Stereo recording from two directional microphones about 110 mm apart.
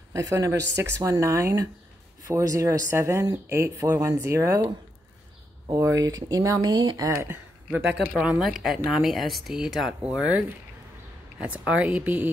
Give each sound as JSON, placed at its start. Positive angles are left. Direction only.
{"t": 0.1, "sound": "speech", "side_deg": -30}
{"t": 5.8, "sound": "speech", "side_deg": -30}
{"t": 7.2, "sound": "speech", "side_deg": -20}